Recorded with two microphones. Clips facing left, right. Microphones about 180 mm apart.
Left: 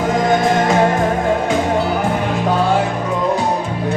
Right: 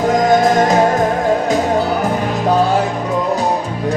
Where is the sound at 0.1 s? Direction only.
40° right (ahead or behind).